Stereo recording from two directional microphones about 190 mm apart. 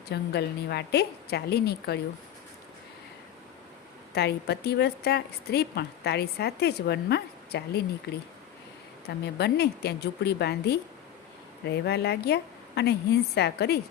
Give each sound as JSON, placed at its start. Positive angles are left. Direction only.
{"t": 0.1, "sound": "a woman's voice", "side_deg": 60}
{"t": 4.1, "sound": "a woman's voice", "side_deg": 60}